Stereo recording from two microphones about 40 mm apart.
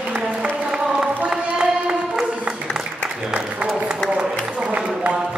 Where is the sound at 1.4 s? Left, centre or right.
Right.